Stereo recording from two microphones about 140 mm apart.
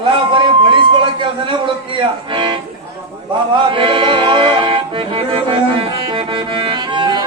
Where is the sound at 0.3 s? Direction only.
35° right (ahead or behind).